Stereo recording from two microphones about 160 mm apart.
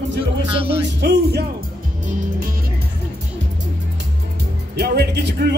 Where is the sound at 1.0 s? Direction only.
90° right.